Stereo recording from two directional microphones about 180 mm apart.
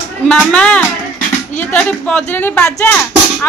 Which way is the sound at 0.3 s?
5° left (ahead or behind).